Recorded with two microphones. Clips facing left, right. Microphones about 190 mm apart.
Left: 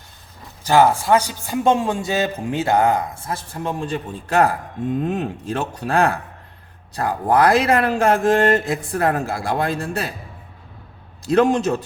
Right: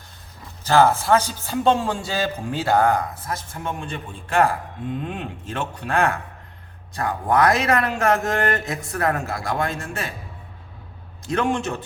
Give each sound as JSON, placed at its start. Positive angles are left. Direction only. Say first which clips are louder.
{"t": 0.6, "sound": "a man's voice", "louder": "left 2 dB", "side_deg": 15}
{"t": 11.3, "sound": "a man's voice", "louder": "left 7 dB", "side_deg": 35}